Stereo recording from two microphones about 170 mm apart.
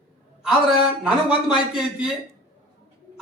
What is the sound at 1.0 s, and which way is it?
Speech, 5° right (ahead or behind).